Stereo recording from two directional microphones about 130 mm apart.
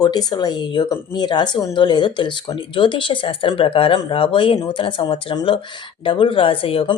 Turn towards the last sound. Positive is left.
turn(degrees=45)  # may be behind; listen again after turning